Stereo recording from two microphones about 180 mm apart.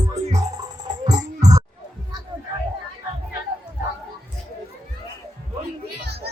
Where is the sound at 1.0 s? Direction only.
20° right (ahead or behind).